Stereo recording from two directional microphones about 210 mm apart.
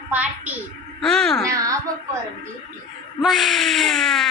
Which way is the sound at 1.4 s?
15° right (ahead or behind).